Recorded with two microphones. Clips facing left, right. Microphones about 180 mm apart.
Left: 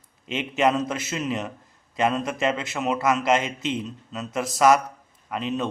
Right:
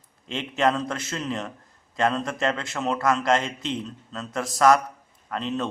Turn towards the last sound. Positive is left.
turn(degrees=10)  # may be behind; listen again after turning